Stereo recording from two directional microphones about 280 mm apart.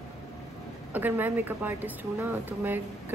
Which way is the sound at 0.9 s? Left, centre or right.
Centre.